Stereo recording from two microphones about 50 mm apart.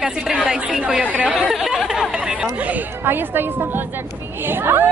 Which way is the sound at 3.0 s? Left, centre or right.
Right.